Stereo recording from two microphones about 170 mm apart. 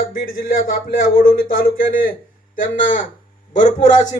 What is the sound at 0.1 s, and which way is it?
Speech, 55° left (ahead or behind).